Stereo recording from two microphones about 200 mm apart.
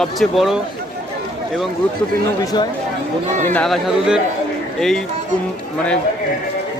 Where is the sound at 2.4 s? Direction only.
20° left (ahead or behind).